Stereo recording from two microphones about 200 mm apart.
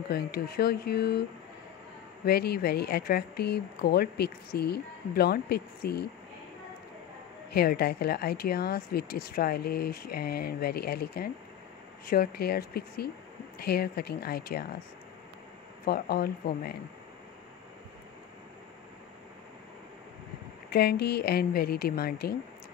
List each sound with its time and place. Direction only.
0.1 s speech: 50° left (ahead or behind)
2.2 s speech: 50° left (ahead or behind)
7.5 s speech: 50° left (ahead or behind)
15.8 s speech: 50° left (ahead or behind)
20.7 s speech: 55° left (ahead or behind)